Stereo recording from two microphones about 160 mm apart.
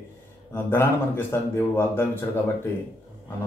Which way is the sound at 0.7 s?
15° left (ahead or behind).